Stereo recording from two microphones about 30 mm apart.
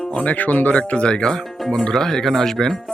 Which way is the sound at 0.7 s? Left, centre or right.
Left.